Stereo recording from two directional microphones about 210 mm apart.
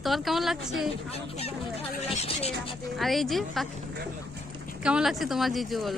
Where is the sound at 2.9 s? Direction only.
Centre (ahead or behind).